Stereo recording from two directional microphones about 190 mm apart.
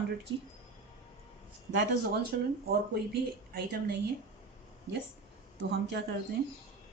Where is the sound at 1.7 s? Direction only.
65° right (ahead or behind).